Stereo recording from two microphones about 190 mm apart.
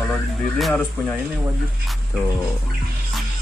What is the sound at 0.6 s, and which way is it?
Music, centre (ahead or behind).